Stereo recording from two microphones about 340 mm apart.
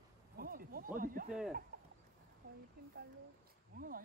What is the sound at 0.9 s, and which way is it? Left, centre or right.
Speech, right.